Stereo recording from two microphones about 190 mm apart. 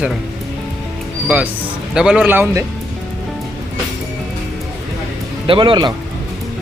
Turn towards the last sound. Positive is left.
turn(degrees=-25)  # may be behind; listen again after turning